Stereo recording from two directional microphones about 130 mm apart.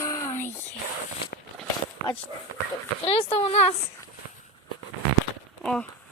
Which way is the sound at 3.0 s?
45° left (ahead or behind).